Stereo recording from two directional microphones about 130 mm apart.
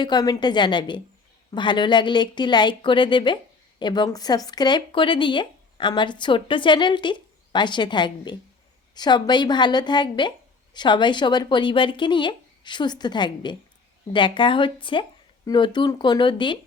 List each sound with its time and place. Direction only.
0.0 s speech: 30° left (ahead or behind)